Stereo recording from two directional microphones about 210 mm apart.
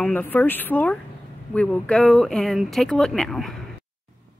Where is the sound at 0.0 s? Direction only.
10° left (ahead or behind).